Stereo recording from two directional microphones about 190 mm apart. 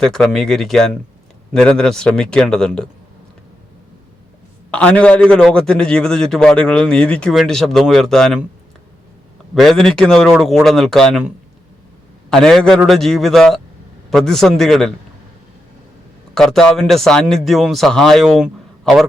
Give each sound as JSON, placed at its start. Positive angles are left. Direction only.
{"t": 0.0, "sound": "a man's voice", "side_deg": 5}
{"t": 4.7, "sound": "a man's voice", "side_deg": 5}
{"t": 9.6, "sound": "a man's voice", "side_deg": 0}
{"t": 12.3, "sound": "a man's voice", "side_deg": 0}
{"t": 16.3, "sound": "a man's voice", "side_deg": 0}